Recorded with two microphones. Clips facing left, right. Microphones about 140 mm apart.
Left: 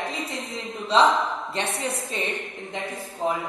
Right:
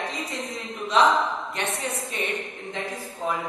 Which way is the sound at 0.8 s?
30° left (ahead or behind).